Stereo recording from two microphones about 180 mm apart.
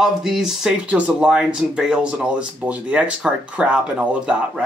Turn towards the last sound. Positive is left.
turn(degrees=-5)  # may be behind; listen again after turning